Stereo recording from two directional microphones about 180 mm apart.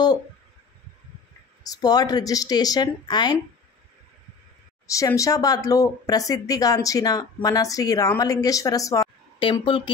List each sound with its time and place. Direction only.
1.6 s a woman's voice: 20° left (ahead or behind)
4.9 s a woman's voice: 20° left (ahead or behind)